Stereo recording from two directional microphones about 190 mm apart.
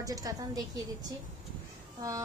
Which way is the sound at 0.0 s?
20° right (ahead or behind).